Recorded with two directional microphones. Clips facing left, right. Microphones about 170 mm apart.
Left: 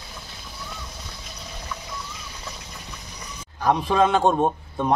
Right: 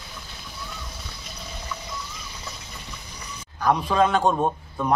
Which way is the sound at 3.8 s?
25° left (ahead or behind).